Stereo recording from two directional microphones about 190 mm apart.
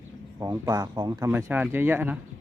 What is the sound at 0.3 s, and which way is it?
Speech, 15° right (ahead or behind).